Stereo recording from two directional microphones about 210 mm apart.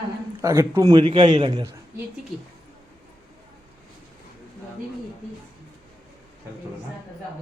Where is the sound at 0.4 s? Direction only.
15° right (ahead or behind).